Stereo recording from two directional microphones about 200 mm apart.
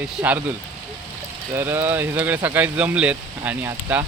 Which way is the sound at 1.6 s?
10° right (ahead or behind).